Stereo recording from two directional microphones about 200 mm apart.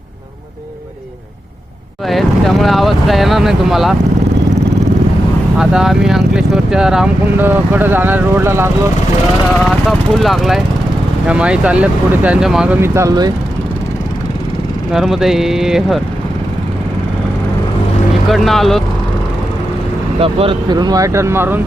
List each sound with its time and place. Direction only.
2.0 s speech: centre (ahead or behind)
5.5 s speech: centre (ahead or behind)
9.6 s speech: centre (ahead or behind); by 13.3 s 20° right (ahead or behind)
14.9 s speech: centre (ahead or behind)
18.3 s speech: centre (ahead or behind)
20.1 s speech: 30° right (ahead or behind); by 21.6 s 10° right (ahead or behind)